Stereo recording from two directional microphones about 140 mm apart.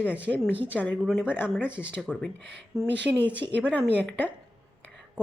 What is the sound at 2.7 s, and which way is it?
Speech, 20° right (ahead or behind).